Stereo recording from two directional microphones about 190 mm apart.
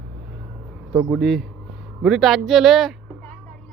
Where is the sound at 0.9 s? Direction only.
15° right (ahead or behind).